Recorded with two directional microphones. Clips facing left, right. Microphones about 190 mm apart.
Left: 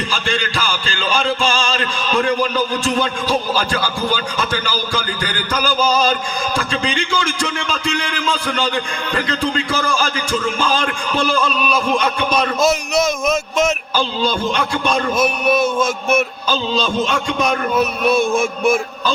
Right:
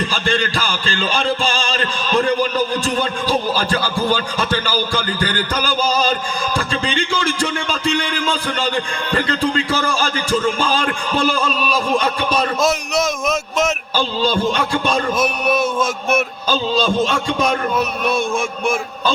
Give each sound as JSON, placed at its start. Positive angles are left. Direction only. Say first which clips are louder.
{"t": 0.1, "sound": "a man's voice", "louder": "right 2 dB", "side_deg": -35}
{"t": 5.2, "sound": "a man's voice", "louder": "right 1 dB", "side_deg": -35}
{"t": 12.5, "sound": "a man's voice", "louder": "left 2 dB", "side_deg": 0}
{"t": 14.2, "sound": "a man's voice", "louder": "right 3 dB", "side_deg": -30}
{"t": 15.1, "sound": "a man's voice", "louder": "left 2 dB", "side_deg": 0}
{"t": 17.1, "sound": "a man's voice", "louder": "even", "side_deg": -30}
{"t": 17.7, "sound": "a man's voice", "louder": "left 3 dB", "side_deg": 5}